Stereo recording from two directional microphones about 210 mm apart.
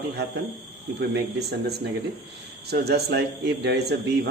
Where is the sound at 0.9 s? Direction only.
50° right (ahead or behind).